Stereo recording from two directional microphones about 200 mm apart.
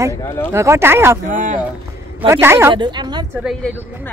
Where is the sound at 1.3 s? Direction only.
40° right (ahead or behind).